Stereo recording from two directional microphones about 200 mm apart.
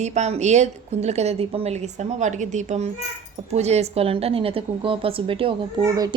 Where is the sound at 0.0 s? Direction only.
35° right (ahead or behind).